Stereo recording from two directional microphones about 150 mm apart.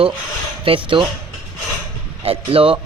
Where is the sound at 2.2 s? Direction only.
40° right (ahead or behind).